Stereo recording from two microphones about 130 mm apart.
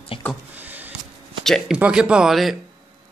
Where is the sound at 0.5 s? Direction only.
15° right (ahead or behind).